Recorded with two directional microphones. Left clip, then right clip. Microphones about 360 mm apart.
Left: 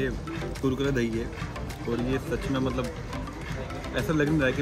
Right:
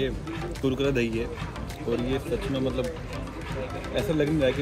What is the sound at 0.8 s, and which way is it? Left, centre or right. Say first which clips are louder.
Speech: right 3 dB; centre.